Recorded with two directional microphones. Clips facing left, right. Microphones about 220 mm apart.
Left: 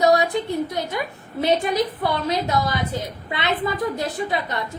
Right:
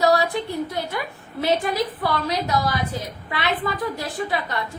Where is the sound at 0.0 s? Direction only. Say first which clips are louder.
Left 2 dB; 20° left (ahead or behind).